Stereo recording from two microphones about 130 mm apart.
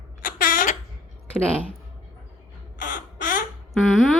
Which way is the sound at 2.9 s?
90° left.